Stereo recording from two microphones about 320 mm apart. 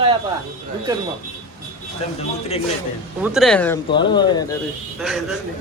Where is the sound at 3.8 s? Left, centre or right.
Centre.